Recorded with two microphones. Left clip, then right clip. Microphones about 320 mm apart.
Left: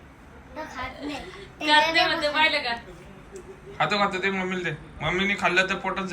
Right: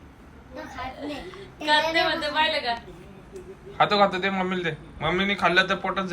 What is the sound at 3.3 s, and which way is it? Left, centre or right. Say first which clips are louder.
A man's voice: right 4 dB; centre.